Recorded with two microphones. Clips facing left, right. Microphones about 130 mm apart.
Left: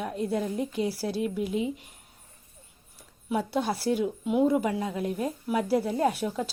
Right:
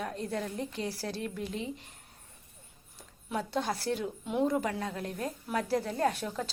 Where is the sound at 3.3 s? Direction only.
10° left (ahead or behind).